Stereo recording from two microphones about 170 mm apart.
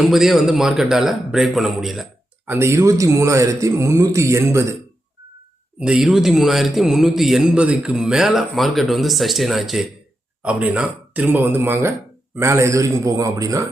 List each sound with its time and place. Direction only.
0.1 s a man's voice: centre (ahead or behind)
2.5 s speech: 15° right (ahead or behind)
5.8 s a man's voice: 5° right (ahead or behind)